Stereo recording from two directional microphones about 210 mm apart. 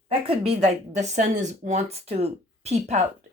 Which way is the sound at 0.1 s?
25° right (ahead or behind).